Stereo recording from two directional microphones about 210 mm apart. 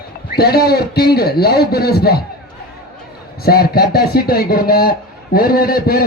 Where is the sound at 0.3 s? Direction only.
50° left (ahead or behind).